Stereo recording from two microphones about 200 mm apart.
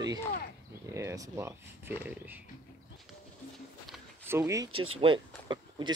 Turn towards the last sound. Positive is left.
turn(degrees=-20)  # may be behind; listen again after turning